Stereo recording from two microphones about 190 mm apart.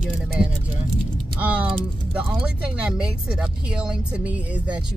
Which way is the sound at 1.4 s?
5° right (ahead or behind).